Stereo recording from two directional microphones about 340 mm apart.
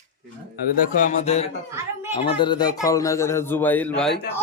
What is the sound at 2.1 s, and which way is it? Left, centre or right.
Speech, centre.